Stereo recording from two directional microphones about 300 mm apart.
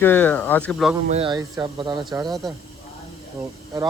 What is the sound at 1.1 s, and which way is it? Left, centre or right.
Speech, centre.